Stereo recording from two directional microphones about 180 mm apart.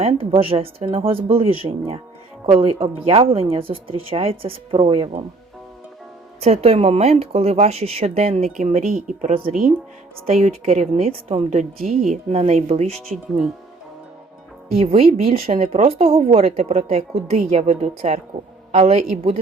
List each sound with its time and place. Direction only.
0.0 s speech: 30° right (ahead or behind)
6.4 s speech: 35° right (ahead or behind)
10.4 s speech: 40° right (ahead or behind)
12.9 s speech: centre (ahead or behind)
14.8 s speech: 35° right (ahead or behind)